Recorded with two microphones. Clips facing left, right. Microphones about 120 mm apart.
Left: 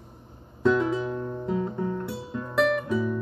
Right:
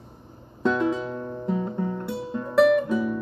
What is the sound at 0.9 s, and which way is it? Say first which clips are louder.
Guitar: left 1 dB; centre (ahead or behind).